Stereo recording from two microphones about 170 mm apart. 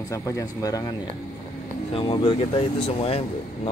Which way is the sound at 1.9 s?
25° left (ahead or behind).